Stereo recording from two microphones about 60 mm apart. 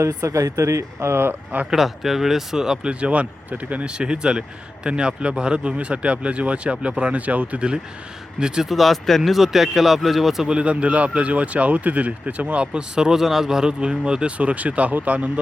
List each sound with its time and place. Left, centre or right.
0.1 s speech: right
1.7 s speech: centre
8.7 s speech: centre; by 15.3 s right